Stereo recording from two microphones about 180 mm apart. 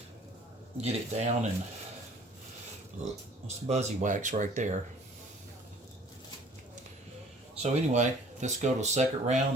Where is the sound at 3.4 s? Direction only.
40° right (ahead or behind).